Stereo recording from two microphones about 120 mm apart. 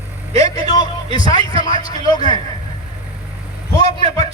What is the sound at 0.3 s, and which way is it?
Vehicle, 30° left (ahead or behind).